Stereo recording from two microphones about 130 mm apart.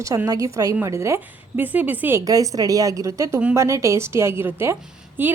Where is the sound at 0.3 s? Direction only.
25° right (ahead or behind).